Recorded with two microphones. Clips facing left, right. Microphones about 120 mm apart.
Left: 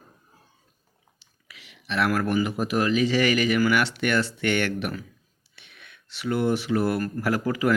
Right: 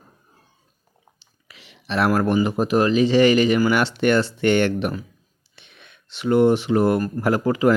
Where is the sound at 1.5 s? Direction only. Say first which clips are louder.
Right 4 dB; 30° right (ahead or behind).